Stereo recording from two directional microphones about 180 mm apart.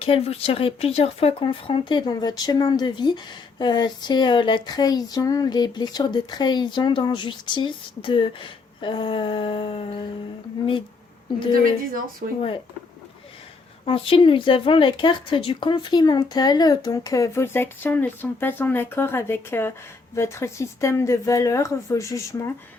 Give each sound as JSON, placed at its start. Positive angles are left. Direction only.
{"t": 0.0, "sound": "speech", "side_deg": 35}
{"t": 12.2, "sound": "speech", "side_deg": -45}
{"t": 13.8, "sound": "speech", "side_deg": 30}